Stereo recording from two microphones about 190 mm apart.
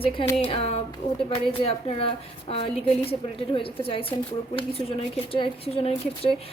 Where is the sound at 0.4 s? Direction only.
30° left (ahead or behind).